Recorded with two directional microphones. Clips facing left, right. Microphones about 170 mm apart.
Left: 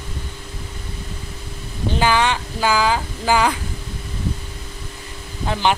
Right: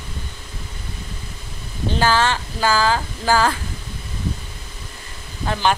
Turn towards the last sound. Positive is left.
turn(degrees=15)  # may be behind; listen again after turning